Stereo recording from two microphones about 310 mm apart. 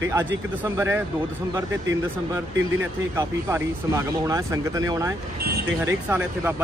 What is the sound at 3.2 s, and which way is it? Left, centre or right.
Speech, centre.